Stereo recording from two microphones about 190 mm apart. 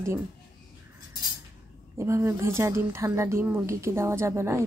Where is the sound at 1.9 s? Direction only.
15° right (ahead or behind).